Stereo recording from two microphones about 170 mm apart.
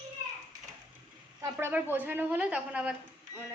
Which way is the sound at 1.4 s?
15° right (ahead or behind).